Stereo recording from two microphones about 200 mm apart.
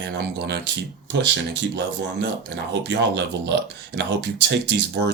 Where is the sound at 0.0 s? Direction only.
60° right (ahead or behind).